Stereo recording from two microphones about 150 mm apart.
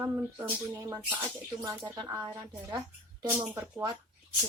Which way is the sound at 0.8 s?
25° right (ahead or behind).